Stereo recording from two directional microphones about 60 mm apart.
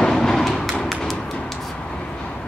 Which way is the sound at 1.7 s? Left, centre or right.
Centre.